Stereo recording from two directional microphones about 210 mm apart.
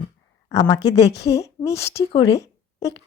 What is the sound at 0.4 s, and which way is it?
Speech, 15° left (ahead or behind).